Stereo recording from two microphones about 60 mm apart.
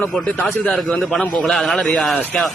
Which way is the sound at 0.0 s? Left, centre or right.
Left.